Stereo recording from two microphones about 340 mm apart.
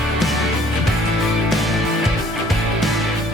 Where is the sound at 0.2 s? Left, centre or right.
Centre.